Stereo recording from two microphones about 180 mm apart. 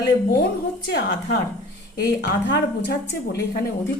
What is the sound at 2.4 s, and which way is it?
Speech, 65° left (ahead or behind).